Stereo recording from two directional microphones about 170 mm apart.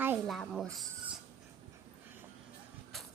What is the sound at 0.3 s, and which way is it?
Speech, centre (ahead or behind).